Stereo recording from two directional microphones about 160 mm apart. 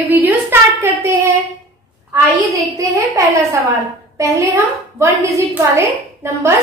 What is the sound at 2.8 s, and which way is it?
Speech, 20° right (ahead or behind).